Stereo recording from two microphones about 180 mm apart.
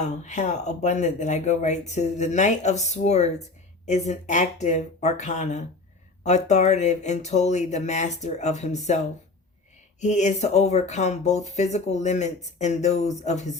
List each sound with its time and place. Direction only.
0.0 s speech: 40° left (ahead or behind)
10.0 s speech: 40° left (ahead or behind)